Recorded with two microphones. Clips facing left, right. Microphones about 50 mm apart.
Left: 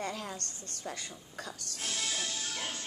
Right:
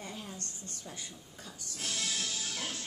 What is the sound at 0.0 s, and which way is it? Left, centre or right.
A woman's voice, left.